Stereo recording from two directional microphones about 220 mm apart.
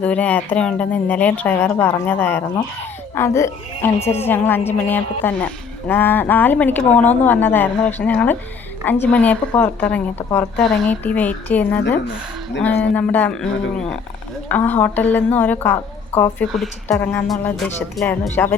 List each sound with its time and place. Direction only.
0.0 s a woman's voice: 5° left (ahead or behind)